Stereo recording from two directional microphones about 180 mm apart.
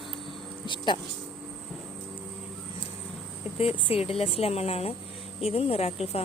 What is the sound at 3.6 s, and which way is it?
Speech, 30° left (ahead or behind).